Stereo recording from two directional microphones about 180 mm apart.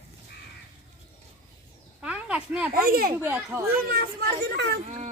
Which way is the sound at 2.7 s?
55° right (ahead or behind).